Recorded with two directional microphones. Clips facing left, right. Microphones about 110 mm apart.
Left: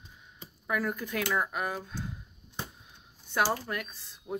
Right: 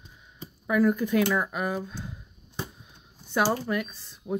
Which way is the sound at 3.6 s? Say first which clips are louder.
Right 7 dB; centre (ahead or behind).